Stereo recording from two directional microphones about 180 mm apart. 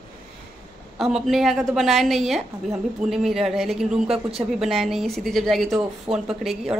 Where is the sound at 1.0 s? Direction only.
Centre (ahead or behind).